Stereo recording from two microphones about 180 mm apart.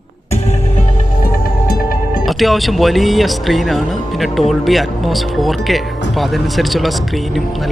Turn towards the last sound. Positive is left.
turn(degrees=0)  # may be behind; listen again after turning